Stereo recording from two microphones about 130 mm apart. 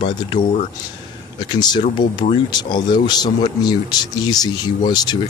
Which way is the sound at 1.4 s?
35° left (ahead or behind).